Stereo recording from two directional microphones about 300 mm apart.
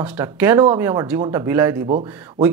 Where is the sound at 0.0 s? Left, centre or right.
Centre.